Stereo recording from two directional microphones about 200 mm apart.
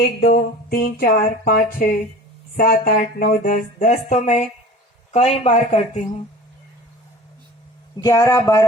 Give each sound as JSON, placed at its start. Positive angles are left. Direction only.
{"t": 0.2, "sound": "a sound", "side_deg": 50}
{"t": 2.6, "sound": "speech", "side_deg": 45}
{"t": 8.0, "sound": "speech", "side_deg": 15}